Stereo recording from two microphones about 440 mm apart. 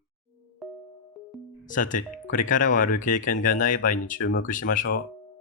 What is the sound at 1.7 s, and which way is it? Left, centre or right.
Speech, centre.